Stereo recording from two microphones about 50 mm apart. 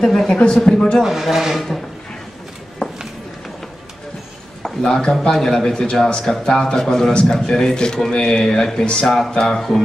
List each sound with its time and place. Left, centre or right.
0.3 s a man's voice: centre
1.0 s speech: centre
2.8 s run: centre
4.8 s a man's voice: centre